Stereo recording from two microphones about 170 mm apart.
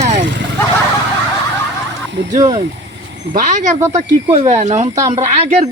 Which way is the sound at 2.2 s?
90° right.